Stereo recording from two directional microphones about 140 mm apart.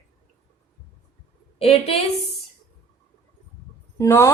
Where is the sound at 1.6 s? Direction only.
45° left (ahead or behind).